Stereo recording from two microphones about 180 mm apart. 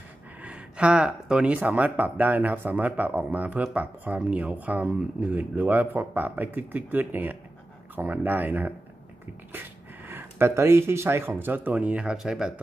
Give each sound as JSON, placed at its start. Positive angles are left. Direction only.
{"t": 0.4, "sound": "speech", "side_deg": -5}